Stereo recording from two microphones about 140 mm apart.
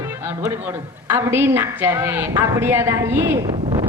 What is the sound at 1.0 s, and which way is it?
A woman's voice, 15° right (ahead or behind).